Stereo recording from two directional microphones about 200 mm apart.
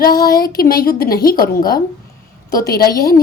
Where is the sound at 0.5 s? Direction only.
50° left (ahead or behind).